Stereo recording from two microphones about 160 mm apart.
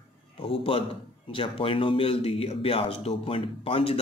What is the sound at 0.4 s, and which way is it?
A man's voice, 35° left (ahead or behind).